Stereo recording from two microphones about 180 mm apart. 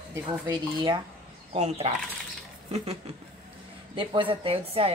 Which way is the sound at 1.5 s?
35° right (ahead or behind).